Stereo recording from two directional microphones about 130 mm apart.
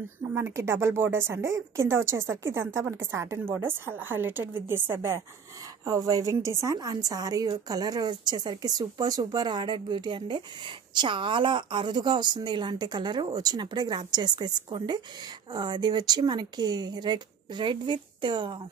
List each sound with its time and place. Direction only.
0.3 s a woman's voice: 20° right (ahead or behind); by 18.6 s 40° right (ahead or behind)